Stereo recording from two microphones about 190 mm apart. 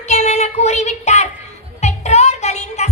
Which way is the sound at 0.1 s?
35° left (ahead or behind).